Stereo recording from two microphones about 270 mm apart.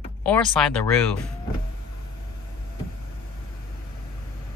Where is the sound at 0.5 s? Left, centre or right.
Centre.